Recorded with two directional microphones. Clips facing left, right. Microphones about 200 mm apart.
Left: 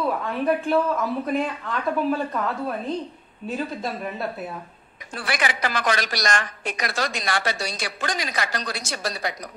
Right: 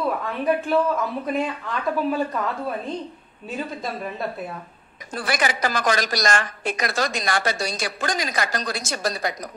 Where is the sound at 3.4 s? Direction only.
Centre (ahead or behind).